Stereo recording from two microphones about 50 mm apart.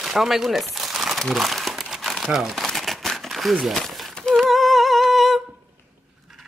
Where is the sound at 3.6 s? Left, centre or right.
Centre.